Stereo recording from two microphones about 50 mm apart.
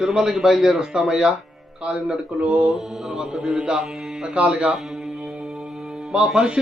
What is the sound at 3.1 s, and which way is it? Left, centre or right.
A man's voice, centre.